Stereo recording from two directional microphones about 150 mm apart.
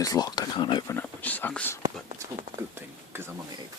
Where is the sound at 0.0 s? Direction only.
25° left (ahead or behind).